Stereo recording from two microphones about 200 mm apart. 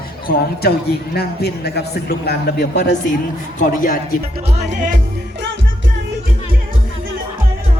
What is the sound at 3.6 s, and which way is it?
Speech, 40° left (ahead or behind).